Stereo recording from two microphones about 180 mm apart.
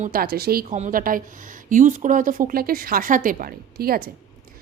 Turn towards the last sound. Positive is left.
turn(degrees=-55)  # may be behind; listen again after turning